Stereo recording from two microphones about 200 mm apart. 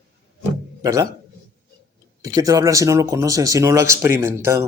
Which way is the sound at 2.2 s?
15° right (ahead or behind).